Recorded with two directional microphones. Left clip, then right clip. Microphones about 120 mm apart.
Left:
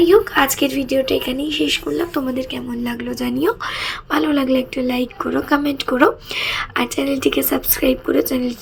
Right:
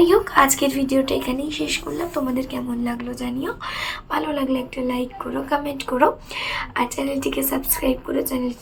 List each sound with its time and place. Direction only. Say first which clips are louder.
0.0 s speech: left 2 dB; 10° left (ahead or behind); by 2.3 s 25° left (ahead or behind)
2.8 s a woman's voice: left 4 dB; 35° left (ahead or behind)